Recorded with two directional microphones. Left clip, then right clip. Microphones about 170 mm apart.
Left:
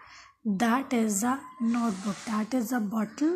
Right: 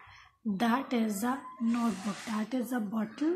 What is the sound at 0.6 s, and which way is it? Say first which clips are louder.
Speech: left 3 dB; 40° left (ahead or behind).